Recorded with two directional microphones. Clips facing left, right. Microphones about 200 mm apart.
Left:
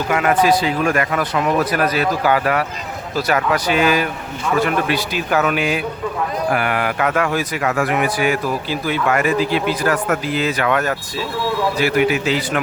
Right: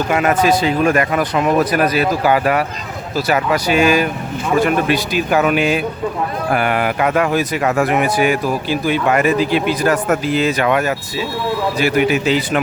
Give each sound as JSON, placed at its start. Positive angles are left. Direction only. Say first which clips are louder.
{"t": 0.1, "sound": "a man's voice", "louder": "even", "side_deg": -25}